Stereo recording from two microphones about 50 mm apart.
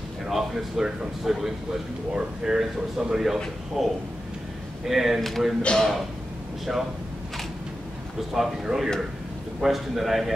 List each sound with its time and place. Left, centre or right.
0.3 s a man's voice: centre
5.6 s a man's voice: centre
8.3 s a man's voice: centre